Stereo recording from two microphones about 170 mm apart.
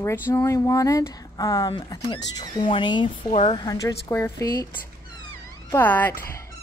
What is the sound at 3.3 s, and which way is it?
Speech, 40° left (ahead or behind).